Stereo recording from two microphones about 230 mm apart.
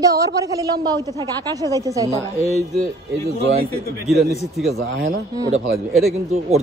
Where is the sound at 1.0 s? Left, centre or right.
Centre.